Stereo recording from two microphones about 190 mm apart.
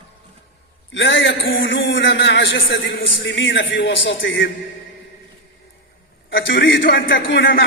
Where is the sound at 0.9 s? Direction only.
75° left (ahead or behind).